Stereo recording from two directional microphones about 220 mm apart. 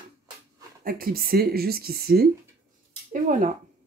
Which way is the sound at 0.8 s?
40° right (ahead or behind).